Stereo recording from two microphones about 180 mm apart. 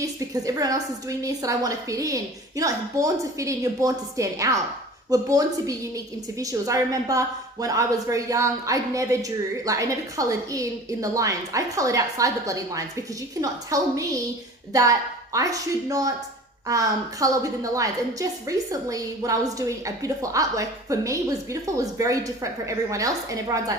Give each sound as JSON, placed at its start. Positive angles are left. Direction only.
{"t": 0.0, "sound": "a woman's voice", "side_deg": -20}